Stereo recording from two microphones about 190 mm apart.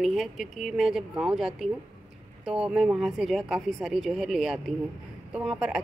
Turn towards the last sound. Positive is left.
turn(degrees=-5)  # may be behind; listen again after turning